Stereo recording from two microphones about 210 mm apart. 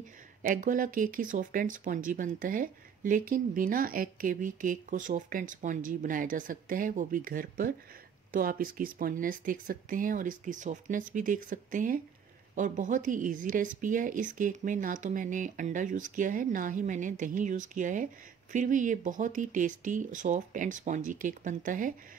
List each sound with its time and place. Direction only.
0.4 s speech: 40° right (ahead or behind)